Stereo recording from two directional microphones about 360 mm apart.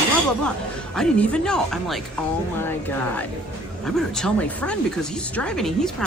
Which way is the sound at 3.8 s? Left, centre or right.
Centre.